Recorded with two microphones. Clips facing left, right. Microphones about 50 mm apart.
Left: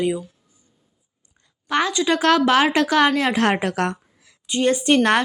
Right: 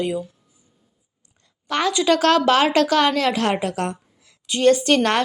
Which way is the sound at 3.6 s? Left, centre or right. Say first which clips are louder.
Left 2 dB; left.